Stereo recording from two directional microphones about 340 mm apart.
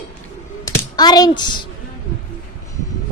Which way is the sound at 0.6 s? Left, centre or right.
Centre.